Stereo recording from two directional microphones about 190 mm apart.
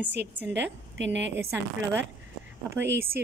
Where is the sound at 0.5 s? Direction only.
70° right (ahead or behind).